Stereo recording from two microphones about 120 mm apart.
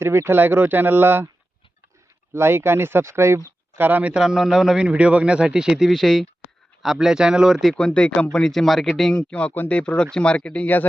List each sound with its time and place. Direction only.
0.0 s speech: 20° right (ahead or behind)
2.3 s a man's voice: 20° right (ahead or behind); by 10.8 s 10° left (ahead or behind)